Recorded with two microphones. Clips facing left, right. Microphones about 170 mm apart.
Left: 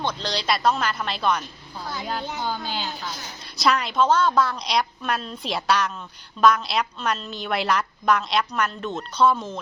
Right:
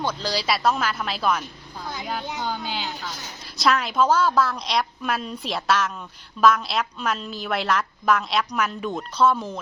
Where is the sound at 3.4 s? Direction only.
Centre (ahead or behind).